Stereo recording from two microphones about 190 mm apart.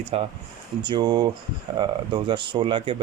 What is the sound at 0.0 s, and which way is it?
Speech, 30° right (ahead or behind).